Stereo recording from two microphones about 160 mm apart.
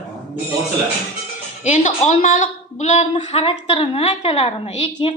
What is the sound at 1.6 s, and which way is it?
A woman's voice, 50° left (ahead or behind).